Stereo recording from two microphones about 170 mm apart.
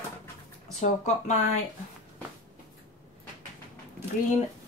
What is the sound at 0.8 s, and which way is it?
Speech, 50° left (ahead or behind).